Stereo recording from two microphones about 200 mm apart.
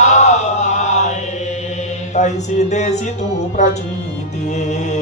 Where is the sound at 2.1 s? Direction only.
35° left (ahead or behind).